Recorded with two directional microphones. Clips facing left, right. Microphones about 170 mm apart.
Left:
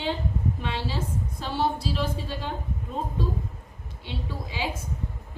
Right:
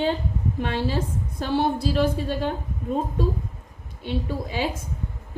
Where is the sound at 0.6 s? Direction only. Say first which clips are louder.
Right 5 dB; 50° right (ahead or behind).